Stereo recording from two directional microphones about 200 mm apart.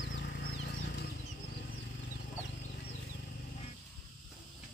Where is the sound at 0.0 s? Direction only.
55° left (ahead or behind).